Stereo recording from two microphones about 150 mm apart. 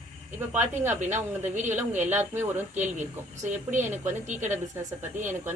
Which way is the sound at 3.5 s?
55° right (ahead or behind).